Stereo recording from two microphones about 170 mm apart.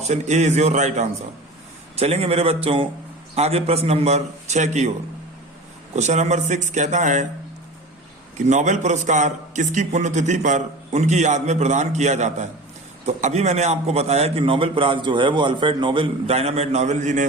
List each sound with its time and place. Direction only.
0.0 s a man's voice: 40° right (ahead or behind)
6.0 s a man's voice: 40° right (ahead or behind)
8.4 s a man's voice: 45° right (ahead or behind)